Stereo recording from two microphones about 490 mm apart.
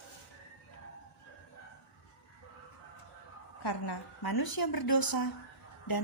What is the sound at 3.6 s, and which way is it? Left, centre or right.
A woman's voice, left.